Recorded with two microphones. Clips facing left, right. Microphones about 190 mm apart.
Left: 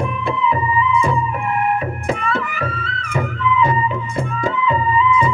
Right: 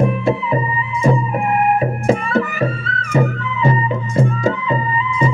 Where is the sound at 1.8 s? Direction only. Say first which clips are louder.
Right 5 dB; 35° right (ahead or behind).